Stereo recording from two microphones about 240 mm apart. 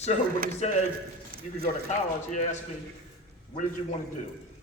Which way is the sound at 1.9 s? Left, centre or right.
Left.